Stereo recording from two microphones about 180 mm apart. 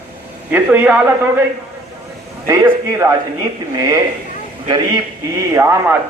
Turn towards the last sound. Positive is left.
turn(degrees=-15)  # may be behind; listen again after turning